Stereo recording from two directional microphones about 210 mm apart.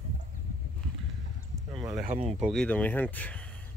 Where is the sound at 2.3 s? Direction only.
5° right (ahead or behind).